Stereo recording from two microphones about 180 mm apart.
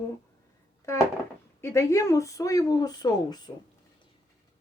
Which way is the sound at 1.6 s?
15° left (ahead or behind).